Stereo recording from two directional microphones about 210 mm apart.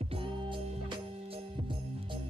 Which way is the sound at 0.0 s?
25° right (ahead or behind).